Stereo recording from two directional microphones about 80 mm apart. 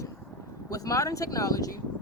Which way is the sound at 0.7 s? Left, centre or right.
Left.